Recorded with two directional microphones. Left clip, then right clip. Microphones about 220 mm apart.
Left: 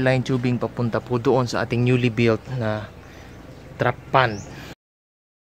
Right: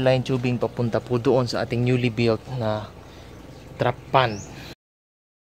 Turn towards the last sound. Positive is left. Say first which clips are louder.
# left 1 dB
turn(degrees=0)  # may be behind; listen again after turning